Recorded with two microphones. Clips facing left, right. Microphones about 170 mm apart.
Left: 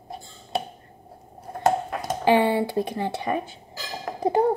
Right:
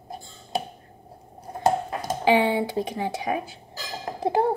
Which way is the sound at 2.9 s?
10° right (ahead or behind).